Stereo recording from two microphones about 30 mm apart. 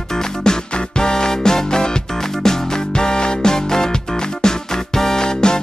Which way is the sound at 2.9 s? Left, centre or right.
Left.